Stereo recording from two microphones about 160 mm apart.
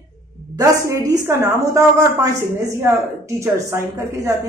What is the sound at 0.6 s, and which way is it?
A woman's voice, 20° right (ahead or behind).